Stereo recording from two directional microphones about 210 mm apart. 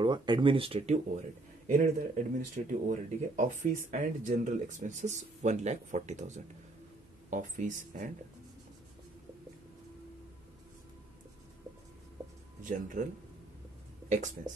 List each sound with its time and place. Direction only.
0.0 s speech: 20° right (ahead or behind); by 8.1 s 35° right (ahead or behind)
12.6 s speech: 35° right (ahead or behind)